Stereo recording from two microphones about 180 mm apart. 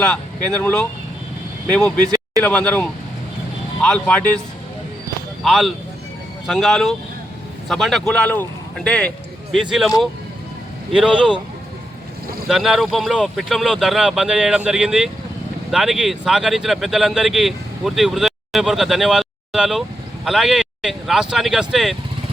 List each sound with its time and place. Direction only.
0.0 s speech: 5° left (ahead or behind)
2.0 s a sound: 20° right (ahead or behind)
2.4 s speech: 5° left (ahead or behind)
5.4 s a man's voice: centre (ahead or behind)
10.9 s speech: 5° right (ahead or behind)
12.5 s speech: centre (ahead or behind)